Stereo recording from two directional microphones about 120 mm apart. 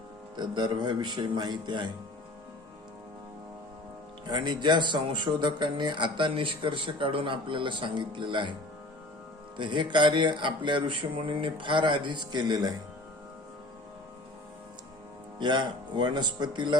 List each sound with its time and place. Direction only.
0.3 s speech: 40° right (ahead or behind)
4.3 s speech: 40° right (ahead or behind)
9.6 s speech: 40° right (ahead or behind)
15.4 s speech: 40° right (ahead or behind)